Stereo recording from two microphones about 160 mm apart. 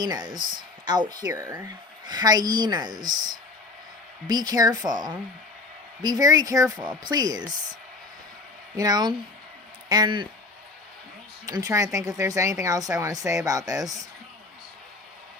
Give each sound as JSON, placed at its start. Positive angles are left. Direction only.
{"t": 0.0, "sound": "speech", "side_deg": -25}
{"t": 3.0, "sound": "speech", "side_deg": -55}
{"t": 4.3, "sound": "speech", "side_deg": -25}
{"t": 8.7, "sound": "speech", "side_deg": -25}
{"t": 11.4, "sound": "speech", "side_deg": -20}